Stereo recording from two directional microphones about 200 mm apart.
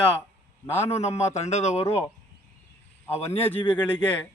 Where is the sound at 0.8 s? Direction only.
30° left (ahead or behind).